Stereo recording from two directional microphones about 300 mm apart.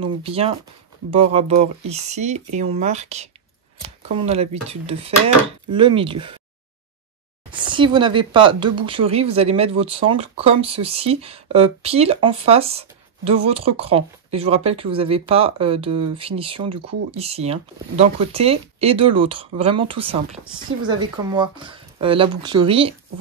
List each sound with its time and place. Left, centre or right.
0.0 s speech: centre
7.5 s speech: centre